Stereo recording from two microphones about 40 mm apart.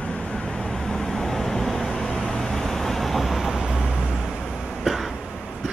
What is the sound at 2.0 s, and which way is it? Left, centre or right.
Vehicle, left.